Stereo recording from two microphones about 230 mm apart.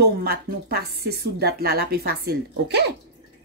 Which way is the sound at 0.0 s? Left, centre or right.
Right.